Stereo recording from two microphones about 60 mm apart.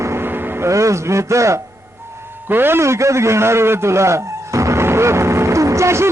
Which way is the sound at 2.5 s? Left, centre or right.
Right.